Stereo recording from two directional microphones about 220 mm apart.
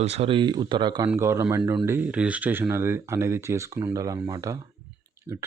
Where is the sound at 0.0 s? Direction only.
25° right (ahead or behind).